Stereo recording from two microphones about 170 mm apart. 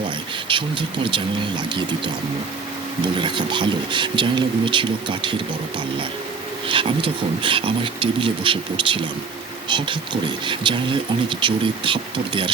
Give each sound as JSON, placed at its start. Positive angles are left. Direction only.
{"t": 0.4, "sound": "speech", "side_deg": -30}
{"t": 3.2, "sound": "speech", "side_deg": -30}
{"t": 6.7, "sound": "speech", "side_deg": -30}